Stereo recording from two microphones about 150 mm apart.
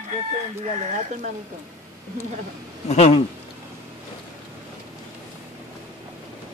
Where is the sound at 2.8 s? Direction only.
45° left (ahead or behind).